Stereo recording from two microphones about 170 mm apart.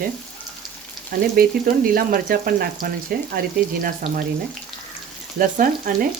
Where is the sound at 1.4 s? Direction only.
60° right (ahead or behind).